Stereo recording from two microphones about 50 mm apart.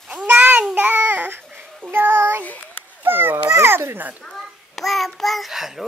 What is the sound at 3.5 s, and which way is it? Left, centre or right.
Speech, right.